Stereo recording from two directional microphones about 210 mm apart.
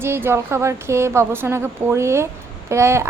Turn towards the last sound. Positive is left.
turn(degrees=-15)  # may be behind; listen again after turning